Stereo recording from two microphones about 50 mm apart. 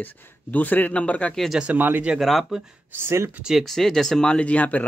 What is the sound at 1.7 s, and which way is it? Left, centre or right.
Speech, right.